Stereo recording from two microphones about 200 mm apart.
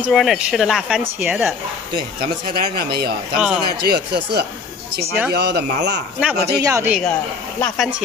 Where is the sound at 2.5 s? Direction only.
50° right (ahead or behind).